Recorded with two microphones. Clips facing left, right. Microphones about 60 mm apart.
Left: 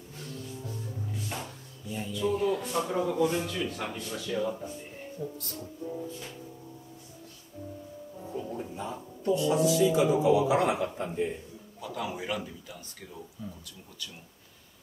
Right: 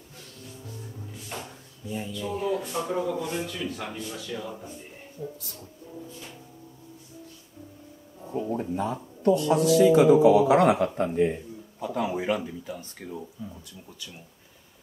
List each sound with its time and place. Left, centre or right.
1.3 s a man's voice: centre
8.4 s speech: right
11.8 s speech: right